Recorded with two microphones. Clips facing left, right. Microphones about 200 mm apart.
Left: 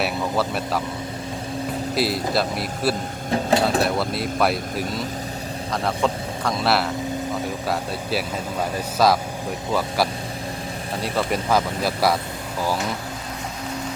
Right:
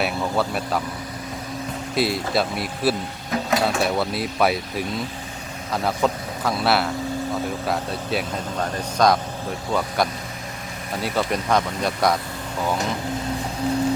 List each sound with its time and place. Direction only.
0.0 s speech: centre (ahead or behind)
2.0 s speech: centre (ahead or behind)
3.2 s a sound: 30° left (ahead or behind)
3.8 s speech: centre (ahead or behind)
11.0 s speech: centre (ahead or behind)